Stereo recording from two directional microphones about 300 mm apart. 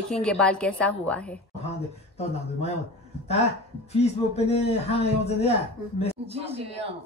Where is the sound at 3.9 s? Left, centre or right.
Left.